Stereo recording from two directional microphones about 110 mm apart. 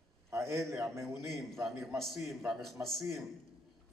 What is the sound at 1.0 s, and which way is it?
A man's voice, centre (ahead or behind).